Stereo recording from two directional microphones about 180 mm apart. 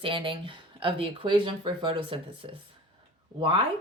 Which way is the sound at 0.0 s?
30° right (ahead or behind).